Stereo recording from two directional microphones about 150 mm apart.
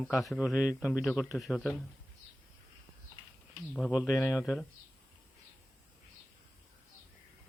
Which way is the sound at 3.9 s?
5° right (ahead or behind).